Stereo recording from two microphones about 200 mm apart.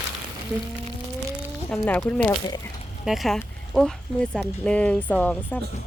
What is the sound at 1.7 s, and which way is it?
Speech, 5° left (ahead or behind).